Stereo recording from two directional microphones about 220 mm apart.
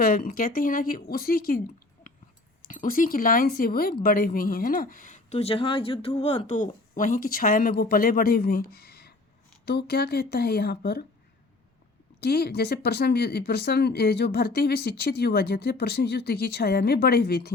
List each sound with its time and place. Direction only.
0.0 s speech: 40° left (ahead or behind)
2.6 s speech: 40° left (ahead or behind)
12.2 s speech: 45° left (ahead or behind)